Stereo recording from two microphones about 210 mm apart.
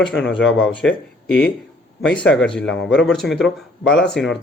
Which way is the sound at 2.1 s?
5° left (ahead or behind).